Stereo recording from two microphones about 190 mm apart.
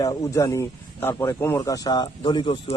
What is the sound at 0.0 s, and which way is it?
Speech, 20° left (ahead or behind).